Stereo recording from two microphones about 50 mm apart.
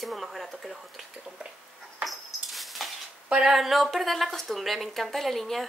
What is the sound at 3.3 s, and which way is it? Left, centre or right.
Speech, centre.